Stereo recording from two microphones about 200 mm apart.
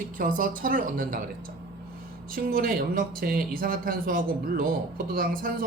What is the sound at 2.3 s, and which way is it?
A woman's voice, 45° right (ahead or behind).